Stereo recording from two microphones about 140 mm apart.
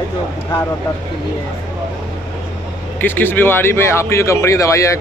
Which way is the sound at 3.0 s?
15° left (ahead or behind).